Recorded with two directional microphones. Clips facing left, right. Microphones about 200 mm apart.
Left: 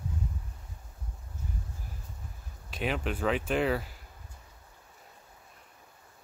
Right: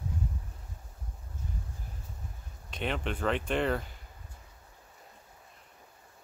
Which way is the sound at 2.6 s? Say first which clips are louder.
Left 2 dB; 5° left (ahead or behind).